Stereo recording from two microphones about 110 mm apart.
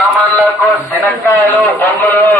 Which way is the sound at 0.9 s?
20° left (ahead or behind).